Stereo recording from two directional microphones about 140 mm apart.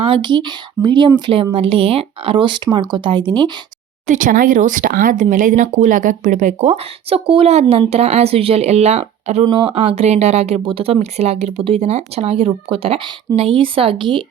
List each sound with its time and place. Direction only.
0.0 s speech: 35° right (ahead or behind)
4.0 s speech: 65° right (ahead or behind); by 9.4 s 50° right (ahead or behind)
9.4 s speech: 35° right (ahead or behind)
10.7 s speech: 40° right (ahead or behind)